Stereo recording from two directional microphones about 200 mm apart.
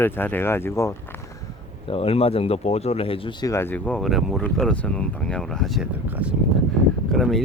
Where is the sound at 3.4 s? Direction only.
10° left (ahead or behind).